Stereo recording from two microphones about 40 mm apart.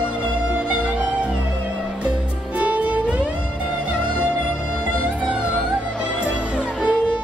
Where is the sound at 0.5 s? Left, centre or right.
Right.